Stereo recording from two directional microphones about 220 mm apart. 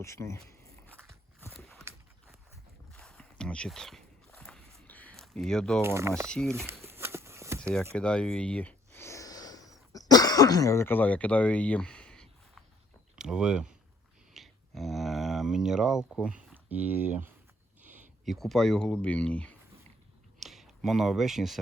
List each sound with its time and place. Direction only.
0.0 s speech: 15° left (ahead or behind)
1.4 s clip-clop: 5° left (ahead or behind)
2.9 s walk: centre (ahead or behind)
5.8 s speech: 10° right (ahead or behind)
6.2 s speech: 5° left (ahead or behind)
6.8 s a sound: 10° right (ahead or behind)
7.9 s speech: 5° left (ahead or behind)
9.0 s a sound: 15° left (ahead or behind)
9.9 s throat clearing: 15° left (ahead or behind)
13.1 s speech: 5° right (ahead or behind)
14.3 s a sound: centre (ahead or behind)
16.2 s speech: 5° right (ahead or behind)